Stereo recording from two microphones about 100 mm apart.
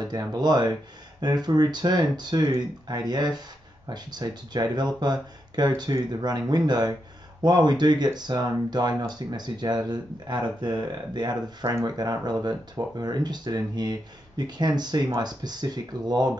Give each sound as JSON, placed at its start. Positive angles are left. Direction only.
{"t": 0.0, "sound": "speech", "side_deg": -45}